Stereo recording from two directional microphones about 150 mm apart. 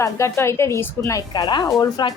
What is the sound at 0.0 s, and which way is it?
A woman's voice, 20° left (ahead or behind).